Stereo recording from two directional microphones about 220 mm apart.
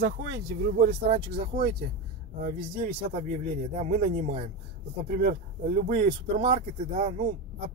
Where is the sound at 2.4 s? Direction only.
45° right (ahead or behind).